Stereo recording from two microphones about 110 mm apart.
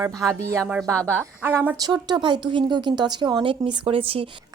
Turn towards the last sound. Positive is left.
turn(degrees=-55)  # may be behind; listen again after turning